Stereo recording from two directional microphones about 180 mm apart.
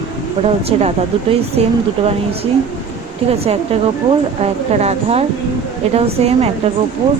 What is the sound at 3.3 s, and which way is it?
Speech, 35° right (ahead or behind).